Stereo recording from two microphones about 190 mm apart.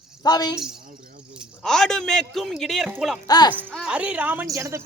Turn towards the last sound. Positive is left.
turn(degrees=-15)  # may be behind; listen again after turning